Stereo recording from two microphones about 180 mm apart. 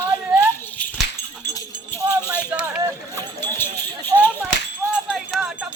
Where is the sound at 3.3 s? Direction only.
10° left (ahead or behind).